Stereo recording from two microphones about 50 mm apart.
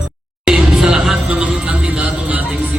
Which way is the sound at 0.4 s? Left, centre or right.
Centre.